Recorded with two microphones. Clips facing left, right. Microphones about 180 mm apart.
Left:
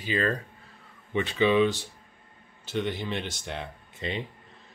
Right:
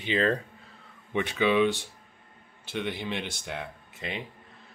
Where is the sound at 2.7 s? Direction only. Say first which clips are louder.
Left 2 dB; 10° right (ahead or behind).